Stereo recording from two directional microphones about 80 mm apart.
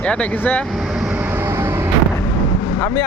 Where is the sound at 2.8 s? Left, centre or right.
Left.